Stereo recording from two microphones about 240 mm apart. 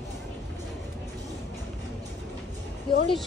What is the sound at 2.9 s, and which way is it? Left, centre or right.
Speech, centre.